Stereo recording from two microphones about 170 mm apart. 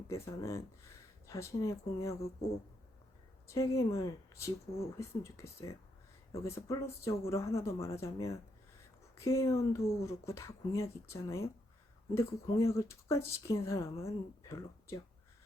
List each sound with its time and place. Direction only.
0.1 s speech: 15° left (ahead or behind)
3.4 s speech: 20° left (ahead or behind)